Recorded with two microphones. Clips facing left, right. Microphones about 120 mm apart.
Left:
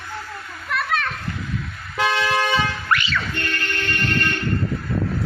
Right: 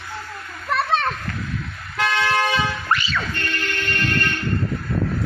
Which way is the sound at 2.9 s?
30° right (ahead or behind).